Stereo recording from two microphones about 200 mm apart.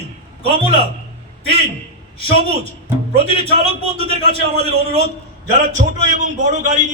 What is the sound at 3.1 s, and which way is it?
Speech, 30° right (ahead or behind).